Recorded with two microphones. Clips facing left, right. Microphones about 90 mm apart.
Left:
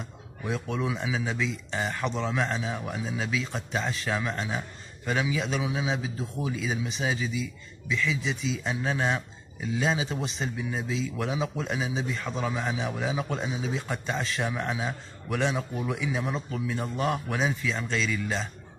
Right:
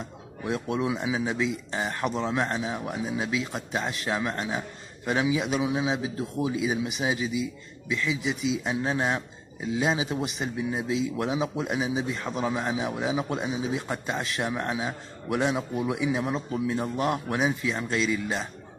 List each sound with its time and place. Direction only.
0.5 s a man's voice: 10° right (ahead or behind)
5.9 s a man's voice: 10° right (ahead or behind)
16.4 s a man's voice: 25° right (ahead or behind)
16.7 s a man's voice: 10° right (ahead or behind)